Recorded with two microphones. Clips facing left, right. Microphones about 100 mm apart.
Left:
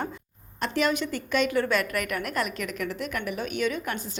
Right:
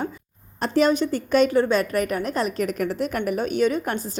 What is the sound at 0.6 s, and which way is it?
A woman's voice, 35° right (ahead or behind).